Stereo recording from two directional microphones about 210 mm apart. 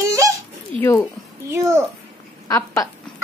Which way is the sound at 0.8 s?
10° left (ahead or behind).